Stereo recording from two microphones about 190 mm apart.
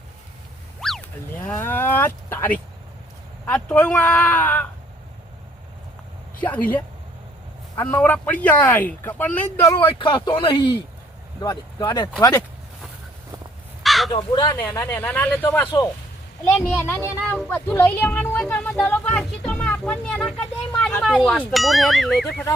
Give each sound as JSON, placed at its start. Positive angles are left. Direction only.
{"t": 0.8, "sound": "a sound", "side_deg": 0}
{"t": 1.4, "sound": "cattle", "side_deg": 10}
{"t": 3.4, "sound": "speech", "side_deg": 10}
{"t": 6.4, "sound": "speech", "side_deg": 10}
{"t": 8.0, "sound": "speech", "side_deg": 10}
{"t": 13.8, "sound": "crow", "side_deg": 0}
{"t": 14.1, "sound": "speech", "side_deg": 25}